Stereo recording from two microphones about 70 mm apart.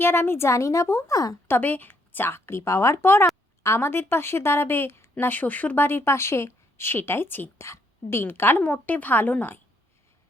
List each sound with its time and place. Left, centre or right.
0.0 s speech: left
1.1 s speech: left
1.5 s speech: left
5.2 s speech: left
7.6 s a woman's voice: left